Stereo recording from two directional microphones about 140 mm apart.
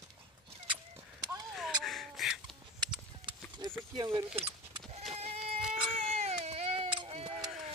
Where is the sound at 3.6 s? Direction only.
30° right (ahead or behind).